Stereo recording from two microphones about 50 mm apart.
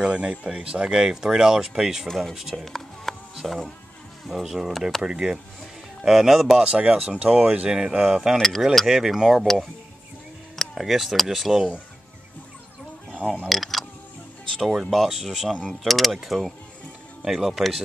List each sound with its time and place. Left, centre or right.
0.0 s speech: right; by 2.6 s centre
2.6 s music: centre
3.4 s speech: centre
6.0 s speech: centre
6.6 s speech: centre
8.4 s speech: centre
8.7 s speech: centre
10.5 s a sound: centre
10.8 s speech: centre
13.5 s a sound: centre
14.6 s speech: centre